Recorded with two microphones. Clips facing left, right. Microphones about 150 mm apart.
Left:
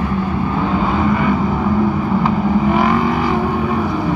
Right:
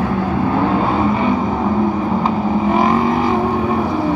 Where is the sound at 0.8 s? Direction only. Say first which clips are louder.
Even; 30° right (ahead or behind).